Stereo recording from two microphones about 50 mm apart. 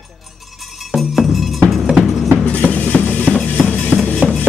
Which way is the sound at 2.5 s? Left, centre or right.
Left.